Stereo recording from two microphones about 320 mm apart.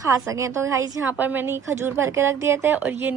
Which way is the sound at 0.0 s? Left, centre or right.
Centre.